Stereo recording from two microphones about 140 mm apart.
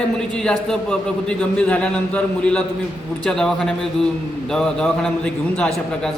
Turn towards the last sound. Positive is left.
turn(degrees=5)  # may be behind; listen again after turning